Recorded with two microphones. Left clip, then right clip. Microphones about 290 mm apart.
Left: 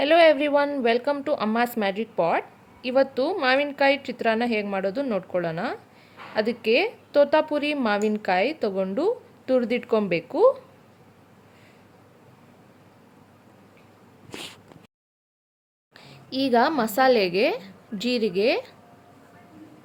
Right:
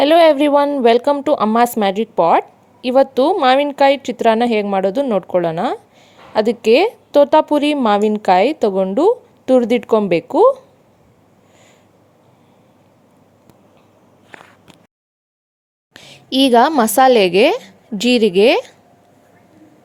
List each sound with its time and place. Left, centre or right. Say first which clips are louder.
0.0 s a woman's voice: right 7 dB; right
15.9 s a woman's voice: right 13 dB; right